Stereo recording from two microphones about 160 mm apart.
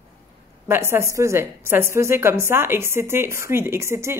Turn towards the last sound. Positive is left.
turn(degrees=-15)  # may be behind; listen again after turning